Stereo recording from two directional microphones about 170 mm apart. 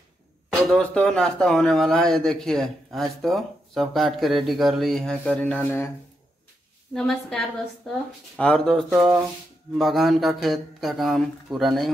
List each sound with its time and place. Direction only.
0.7 s a man's voice: 5° left (ahead or behind)
6.9 s a man's voice: 5° left (ahead or behind)
8.9 s speech: 20° right (ahead or behind)
9.8 s a man's voice: centre (ahead or behind)